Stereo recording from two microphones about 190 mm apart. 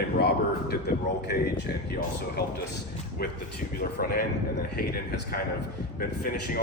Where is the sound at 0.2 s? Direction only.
60° left (ahead or behind).